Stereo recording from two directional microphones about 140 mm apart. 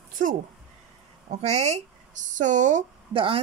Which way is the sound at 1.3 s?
50° right (ahead or behind).